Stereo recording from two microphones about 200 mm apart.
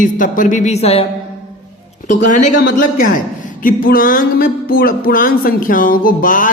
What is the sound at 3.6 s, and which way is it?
Music, 45° left (ahead or behind).